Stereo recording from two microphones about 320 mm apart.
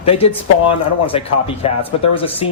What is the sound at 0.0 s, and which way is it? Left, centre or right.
Speech, centre.